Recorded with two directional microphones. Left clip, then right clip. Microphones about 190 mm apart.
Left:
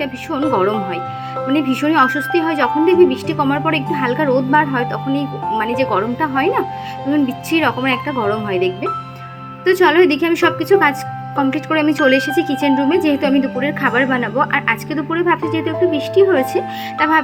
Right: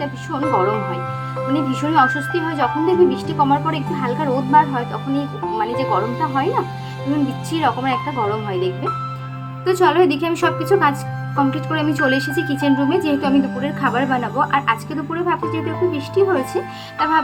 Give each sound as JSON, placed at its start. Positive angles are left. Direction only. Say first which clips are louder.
{"t": 0.0, "sound": "a woman's voice", "louder": "left 3 dB", "side_deg": 20}